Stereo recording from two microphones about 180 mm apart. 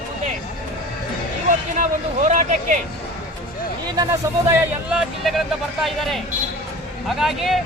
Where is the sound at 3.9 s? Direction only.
20° right (ahead or behind).